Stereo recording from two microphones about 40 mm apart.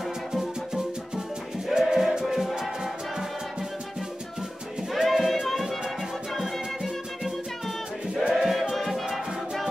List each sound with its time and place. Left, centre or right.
0.3 s music: centre
5.0 s music: centre
8.1 s music: right
8.4 s music: centre